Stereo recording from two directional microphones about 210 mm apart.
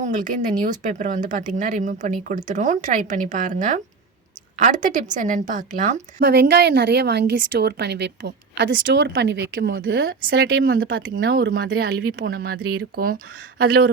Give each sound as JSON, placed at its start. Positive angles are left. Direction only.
{"t": 0.0, "sound": "speech", "side_deg": -40}
{"t": 6.1, "sound": "a woman's voice", "side_deg": -55}